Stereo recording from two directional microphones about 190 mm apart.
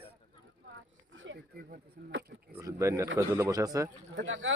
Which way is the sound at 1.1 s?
75° right (ahead or behind).